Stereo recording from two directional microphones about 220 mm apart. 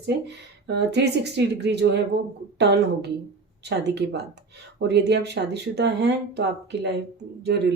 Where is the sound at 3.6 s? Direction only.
50° right (ahead or behind).